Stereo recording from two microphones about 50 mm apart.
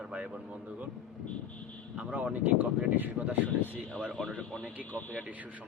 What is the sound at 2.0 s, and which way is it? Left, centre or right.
Speech, right.